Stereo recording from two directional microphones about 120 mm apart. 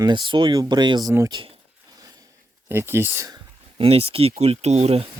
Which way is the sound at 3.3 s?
50° right (ahead or behind).